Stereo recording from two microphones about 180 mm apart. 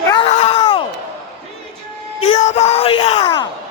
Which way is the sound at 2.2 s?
35° left (ahead or behind).